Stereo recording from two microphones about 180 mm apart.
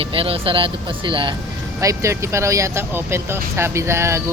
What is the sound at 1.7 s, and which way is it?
Speech, 15° right (ahead or behind).